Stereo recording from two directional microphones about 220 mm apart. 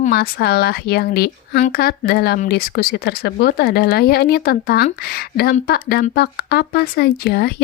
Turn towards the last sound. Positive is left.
turn(degrees=45)  # may be behind; listen again after turning